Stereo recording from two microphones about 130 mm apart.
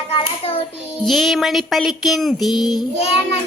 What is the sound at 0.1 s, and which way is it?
Hands, 45° left (ahead or behind).